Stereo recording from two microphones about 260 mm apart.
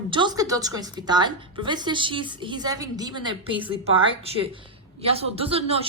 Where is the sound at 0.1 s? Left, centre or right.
Centre.